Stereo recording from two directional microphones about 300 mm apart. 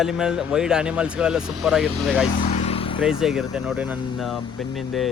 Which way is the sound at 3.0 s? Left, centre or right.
Centre.